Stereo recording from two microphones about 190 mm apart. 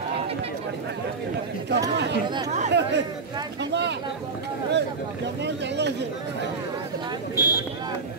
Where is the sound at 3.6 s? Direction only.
65° right (ahead or behind).